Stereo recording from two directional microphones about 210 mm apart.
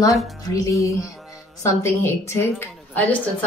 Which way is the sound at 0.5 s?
15° left (ahead or behind).